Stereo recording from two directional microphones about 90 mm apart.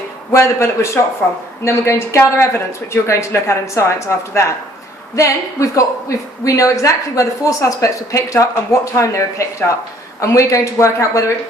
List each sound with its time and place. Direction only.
0.3 s a woman's voice: 30° left (ahead or behind)
1.2 s speech: 5° left (ahead or behind)
1.6 s a woman's voice: 30° left (ahead or behind)